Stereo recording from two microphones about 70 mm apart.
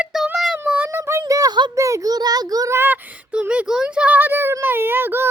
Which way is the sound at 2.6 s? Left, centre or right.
Right.